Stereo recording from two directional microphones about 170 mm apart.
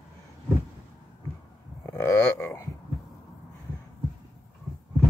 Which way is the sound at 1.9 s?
15° left (ahead or behind).